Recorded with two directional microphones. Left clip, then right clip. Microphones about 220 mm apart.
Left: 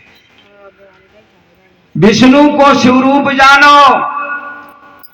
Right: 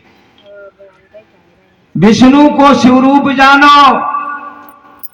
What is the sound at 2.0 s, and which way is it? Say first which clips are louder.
A man's voice: even; 55° right (ahead or behind).